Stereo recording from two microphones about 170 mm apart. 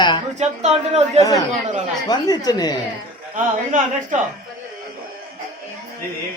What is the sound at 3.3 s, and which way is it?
Speech, 50° right (ahead or behind).